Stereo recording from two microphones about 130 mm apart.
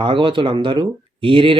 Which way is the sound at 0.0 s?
40° right (ahead or behind).